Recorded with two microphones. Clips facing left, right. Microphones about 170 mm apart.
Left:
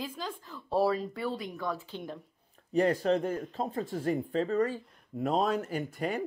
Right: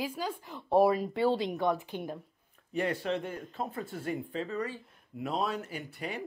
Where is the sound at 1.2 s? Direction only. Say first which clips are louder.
Right 7 dB; 25° right (ahead or behind); by 2.2 s 10° right (ahead or behind).